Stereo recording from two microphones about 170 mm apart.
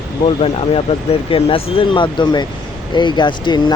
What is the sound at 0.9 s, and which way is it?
Speech, 40° left (ahead or behind).